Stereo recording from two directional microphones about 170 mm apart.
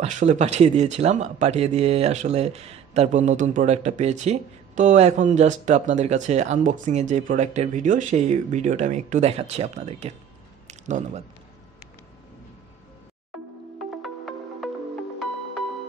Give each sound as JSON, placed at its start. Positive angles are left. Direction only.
{"t": 0.0, "sound": "speech", "side_deg": -45}
{"t": 14.0, "sound": "music", "side_deg": 0}